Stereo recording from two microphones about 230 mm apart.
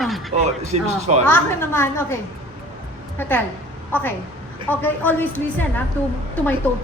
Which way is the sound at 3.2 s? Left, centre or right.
Centre.